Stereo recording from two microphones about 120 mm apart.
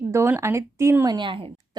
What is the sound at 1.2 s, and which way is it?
Speech, 45° right (ahead or behind).